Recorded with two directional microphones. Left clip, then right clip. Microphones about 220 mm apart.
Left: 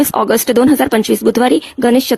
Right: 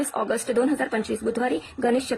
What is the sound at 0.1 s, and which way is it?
Speech, 45° left (ahead or behind).